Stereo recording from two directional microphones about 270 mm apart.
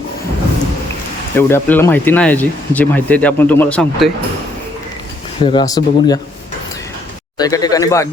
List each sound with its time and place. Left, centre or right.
1.4 s speech: centre
5.4 s speech: centre
7.3 s speech: centre